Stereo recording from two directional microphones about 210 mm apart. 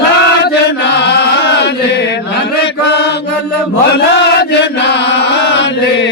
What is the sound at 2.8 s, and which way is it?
Mantra, 55° left (ahead or behind).